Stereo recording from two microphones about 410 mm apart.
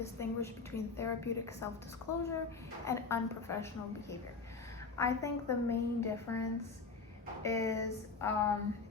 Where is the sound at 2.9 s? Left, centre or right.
Centre.